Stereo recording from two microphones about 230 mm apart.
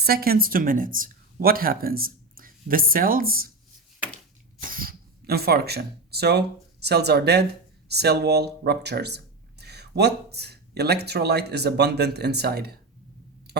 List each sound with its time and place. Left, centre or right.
0.0 s speech: right
4.6 s speech: right
13.5 s a sound: right